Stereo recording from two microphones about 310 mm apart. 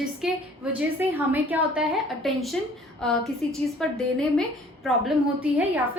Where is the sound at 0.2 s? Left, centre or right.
Centre.